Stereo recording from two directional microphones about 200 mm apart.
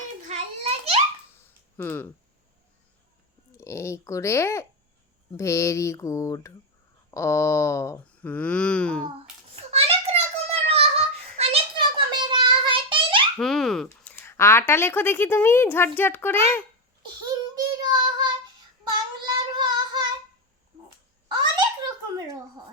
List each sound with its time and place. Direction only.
0.3 s a sound: 30° right (ahead or behind)
1.7 s speech: 10° left (ahead or behind)
3.6 s speech: 15° left (ahead or behind)
9.7 s child singing: 30° right (ahead or behind)
13.4 s speech: centre (ahead or behind)
17.5 s child singing: 20° right (ahead or behind)
21.2 s a sound: 20° right (ahead or behind)